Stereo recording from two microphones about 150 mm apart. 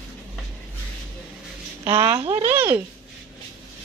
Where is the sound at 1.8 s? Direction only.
35° right (ahead or behind).